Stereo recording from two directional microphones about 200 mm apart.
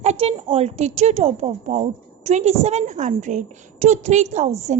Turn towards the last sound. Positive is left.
turn(degrees=-35)  # may be behind; listen again after turning